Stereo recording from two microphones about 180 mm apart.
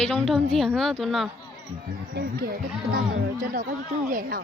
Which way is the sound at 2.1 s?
55° right (ahead or behind).